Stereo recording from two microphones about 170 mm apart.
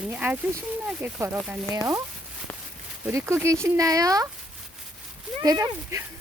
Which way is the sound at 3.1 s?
15° right (ahead or behind).